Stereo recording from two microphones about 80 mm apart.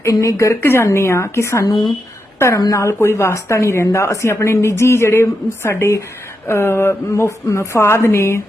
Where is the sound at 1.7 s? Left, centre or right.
Left.